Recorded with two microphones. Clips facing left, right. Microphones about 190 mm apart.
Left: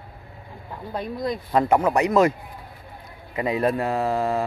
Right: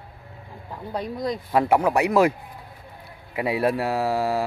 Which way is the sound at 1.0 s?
35° right (ahead or behind).